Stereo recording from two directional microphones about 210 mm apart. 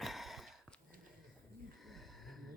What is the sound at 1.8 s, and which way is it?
Snort, centre (ahead or behind).